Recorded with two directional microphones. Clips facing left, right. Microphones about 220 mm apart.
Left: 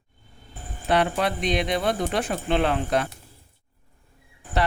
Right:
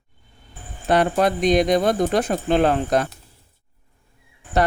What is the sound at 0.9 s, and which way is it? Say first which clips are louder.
Speech: right 4 dB; 45° right (ahead or behind).